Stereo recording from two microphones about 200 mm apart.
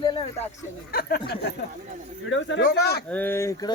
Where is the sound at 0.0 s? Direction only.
20° left (ahead or behind).